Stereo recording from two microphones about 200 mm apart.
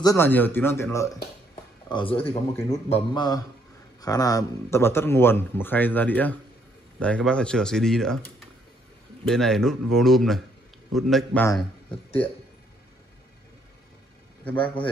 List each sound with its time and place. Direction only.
0.0 s speech: 15° left (ahead or behind)
9.3 s speech: centre (ahead or behind)
14.4 s speech: 5° left (ahead or behind)